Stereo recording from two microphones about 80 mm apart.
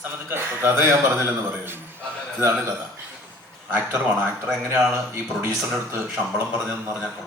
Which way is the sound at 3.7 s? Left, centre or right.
Right.